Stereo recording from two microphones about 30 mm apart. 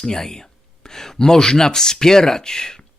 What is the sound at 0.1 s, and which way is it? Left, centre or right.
Speech, left.